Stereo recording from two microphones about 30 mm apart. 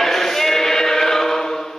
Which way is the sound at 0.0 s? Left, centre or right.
Centre.